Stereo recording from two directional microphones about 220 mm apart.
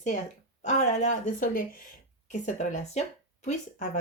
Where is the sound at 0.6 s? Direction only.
30° left (ahead or behind).